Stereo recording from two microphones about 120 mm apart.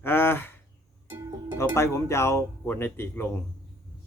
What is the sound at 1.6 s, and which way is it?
Speech, 25° left (ahead or behind).